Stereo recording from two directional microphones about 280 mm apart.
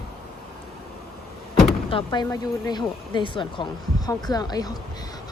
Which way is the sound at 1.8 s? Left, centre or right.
Centre.